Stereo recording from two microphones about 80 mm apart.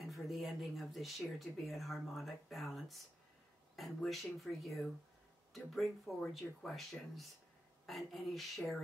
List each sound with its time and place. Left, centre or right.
0.0 s speech: centre